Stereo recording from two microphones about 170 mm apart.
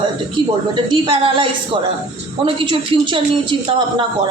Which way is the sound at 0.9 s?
30° right (ahead or behind).